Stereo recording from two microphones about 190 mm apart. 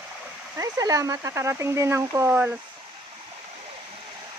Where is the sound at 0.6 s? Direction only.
20° right (ahead or behind).